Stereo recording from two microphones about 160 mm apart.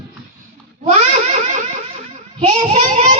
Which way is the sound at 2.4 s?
40° right (ahead or behind).